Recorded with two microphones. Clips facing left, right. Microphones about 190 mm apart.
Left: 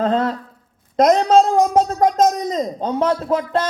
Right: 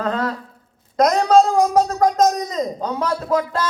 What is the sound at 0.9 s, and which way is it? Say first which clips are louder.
A man's voice: left 1 dB; 25° left (ahead or behind).